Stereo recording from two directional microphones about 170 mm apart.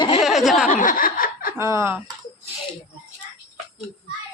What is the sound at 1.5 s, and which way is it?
Speech, 15° right (ahead or behind).